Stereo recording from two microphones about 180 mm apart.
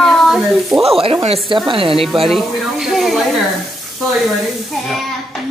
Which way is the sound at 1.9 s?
Centre (ahead or behind).